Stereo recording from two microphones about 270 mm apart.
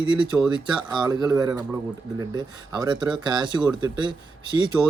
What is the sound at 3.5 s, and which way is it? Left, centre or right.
Speech, centre.